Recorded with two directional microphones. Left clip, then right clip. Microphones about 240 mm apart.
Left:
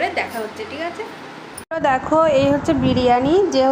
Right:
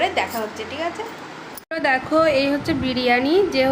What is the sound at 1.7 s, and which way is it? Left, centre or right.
A woman's voice, centre.